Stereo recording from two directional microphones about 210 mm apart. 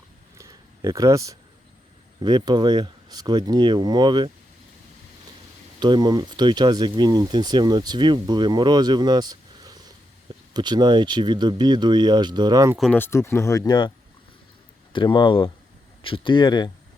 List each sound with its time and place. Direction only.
0.3 s a sound: 15° right (ahead or behind)
2.2 s speech: 20° right (ahead or behind)
5.8 s speech: 20° right (ahead or behind)
12.7 s speech: 5° left (ahead or behind); by 13.9 s 20° left (ahead or behind)
14.9 s speech: 20° left (ahead or behind)